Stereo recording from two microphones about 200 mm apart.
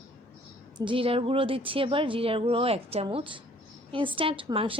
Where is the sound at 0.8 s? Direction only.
25° right (ahead or behind).